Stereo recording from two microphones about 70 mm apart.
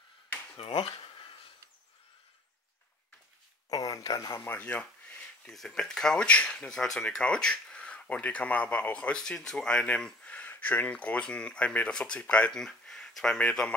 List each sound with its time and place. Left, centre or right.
3.7 s speech: left
4.4 s a sound: left
5.5 s speech: centre